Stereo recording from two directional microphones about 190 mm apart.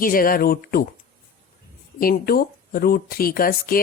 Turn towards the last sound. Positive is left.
turn(degrees=50)  # may be behind; listen again after turning